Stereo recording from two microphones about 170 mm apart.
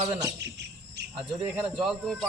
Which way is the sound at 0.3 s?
85° right.